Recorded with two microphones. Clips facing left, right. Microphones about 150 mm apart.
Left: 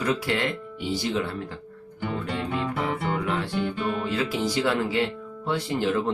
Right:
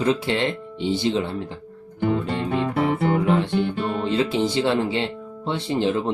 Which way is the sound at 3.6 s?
30° right (ahead or behind).